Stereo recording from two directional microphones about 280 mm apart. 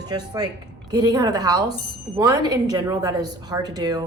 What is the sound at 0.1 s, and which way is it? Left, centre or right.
A woman's voice, centre.